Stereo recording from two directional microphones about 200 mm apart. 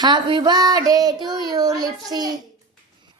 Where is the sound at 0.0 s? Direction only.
25° right (ahead or behind).